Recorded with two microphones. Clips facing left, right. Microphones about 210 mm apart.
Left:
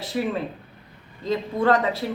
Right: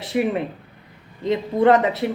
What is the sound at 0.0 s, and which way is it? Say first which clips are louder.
A woman's voice: right 4 dB; 20° right (ahead or behind).